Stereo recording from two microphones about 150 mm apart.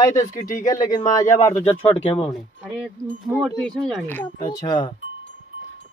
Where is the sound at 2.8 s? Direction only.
5° right (ahead or behind); by 4.3 s 10° left (ahead or behind).